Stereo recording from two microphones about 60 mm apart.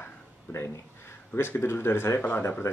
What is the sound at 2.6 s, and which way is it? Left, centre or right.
Speech, left.